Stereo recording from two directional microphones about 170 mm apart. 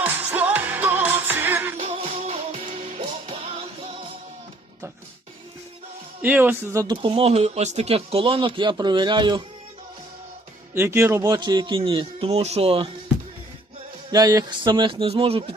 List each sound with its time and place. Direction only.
0.0 s music: 10° right (ahead or behind)
1.8 s music: 40° right (ahead or behind)
6.2 s speech: 10° right (ahead or behind)
6.8 s speech: 30° right (ahead or behind)
10.8 s speech: 15° right (ahead or behind); by 12.9 s 35° right (ahead or behind)
14.1 s speech: 20° right (ahead or behind)